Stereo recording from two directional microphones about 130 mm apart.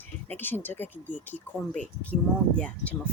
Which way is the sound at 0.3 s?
15° left (ahead or behind).